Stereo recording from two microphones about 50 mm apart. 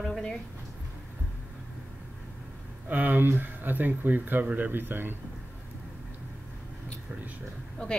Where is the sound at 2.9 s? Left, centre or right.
Right.